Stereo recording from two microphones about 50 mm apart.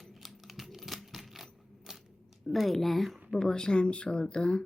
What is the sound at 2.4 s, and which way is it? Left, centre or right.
Speech, centre.